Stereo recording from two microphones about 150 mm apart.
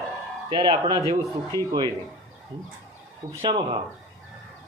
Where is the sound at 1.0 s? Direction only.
20° left (ahead or behind).